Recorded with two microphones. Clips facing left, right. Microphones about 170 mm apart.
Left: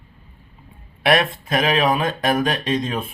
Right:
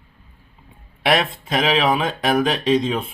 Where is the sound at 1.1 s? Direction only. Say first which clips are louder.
Left 1 dB; 25° right (ahead or behind).